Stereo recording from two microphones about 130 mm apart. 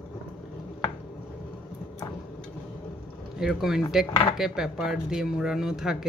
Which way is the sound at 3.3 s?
5° right (ahead or behind).